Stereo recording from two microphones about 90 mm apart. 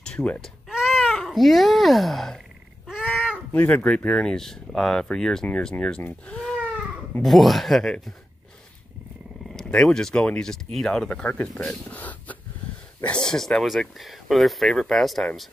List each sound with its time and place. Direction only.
0.0 s baby cry: 10° left (ahead or behind)
0.4 s speech: 5° right (ahead or behind)
2.9 s a sound: 5° right (ahead or behind)
3.5 s speech: 15° left (ahead or behind)
9.7 s speech: 5° left (ahead or behind)